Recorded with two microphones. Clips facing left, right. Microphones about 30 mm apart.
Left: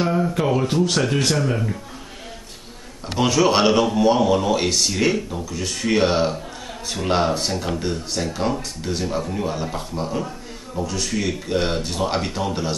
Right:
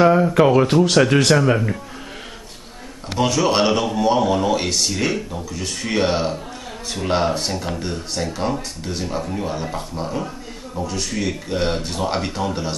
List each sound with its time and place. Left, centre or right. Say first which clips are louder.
0.0 s speech: right 7 dB; right
3.2 s a man's voice: even; centre